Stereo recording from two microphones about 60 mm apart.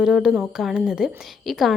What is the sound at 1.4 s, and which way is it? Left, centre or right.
Speech, centre.